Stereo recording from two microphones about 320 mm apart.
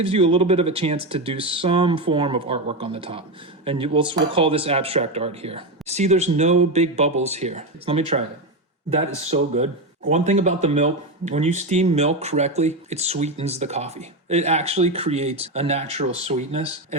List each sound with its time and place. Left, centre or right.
0.0 s speech: centre
9.2 s speech: centre